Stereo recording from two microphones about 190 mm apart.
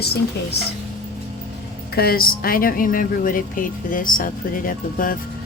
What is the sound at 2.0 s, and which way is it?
Speech, 50° left (ahead or behind).